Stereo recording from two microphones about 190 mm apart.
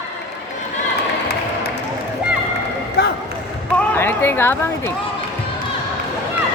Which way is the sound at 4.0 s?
10° left (ahead or behind).